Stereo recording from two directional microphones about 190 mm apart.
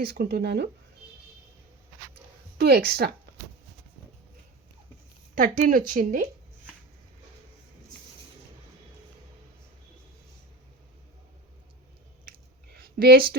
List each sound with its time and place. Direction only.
0.0 s speech: 55° right (ahead or behind)
2.6 s speech: 60° right (ahead or behind)
5.3 s speech: 45° right (ahead or behind)
12.7 s a sound: 55° right (ahead or behind)